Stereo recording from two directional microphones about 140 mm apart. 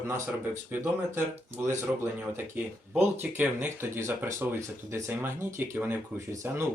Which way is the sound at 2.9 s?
15° right (ahead or behind).